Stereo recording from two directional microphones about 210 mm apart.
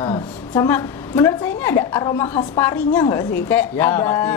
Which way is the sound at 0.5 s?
10° left (ahead or behind).